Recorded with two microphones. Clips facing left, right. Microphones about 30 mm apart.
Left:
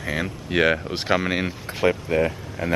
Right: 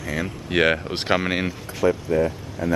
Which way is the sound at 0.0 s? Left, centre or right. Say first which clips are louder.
Left 1 dB; left.